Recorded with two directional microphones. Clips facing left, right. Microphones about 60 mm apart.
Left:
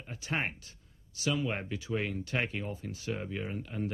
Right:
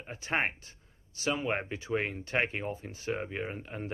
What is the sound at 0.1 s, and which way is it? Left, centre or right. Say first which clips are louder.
Speech: right 3 dB; right.